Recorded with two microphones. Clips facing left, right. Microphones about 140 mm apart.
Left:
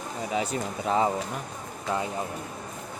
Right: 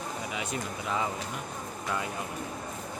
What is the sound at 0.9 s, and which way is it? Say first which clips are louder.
Speech: left 8 dB; 35° left (ahead or behind).